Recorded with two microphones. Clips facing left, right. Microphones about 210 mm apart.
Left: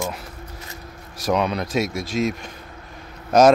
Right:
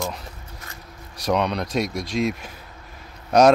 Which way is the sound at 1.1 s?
Centre (ahead or behind).